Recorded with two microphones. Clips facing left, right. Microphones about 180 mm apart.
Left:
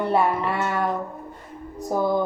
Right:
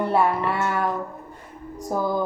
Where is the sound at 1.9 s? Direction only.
25° left (ahead or behind).